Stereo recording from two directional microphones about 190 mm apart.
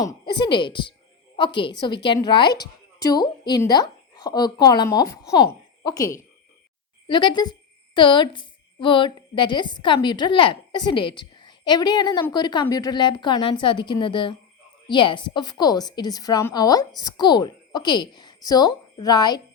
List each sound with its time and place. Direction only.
0.0 s a woman's voice: 20° left (ahead or behind)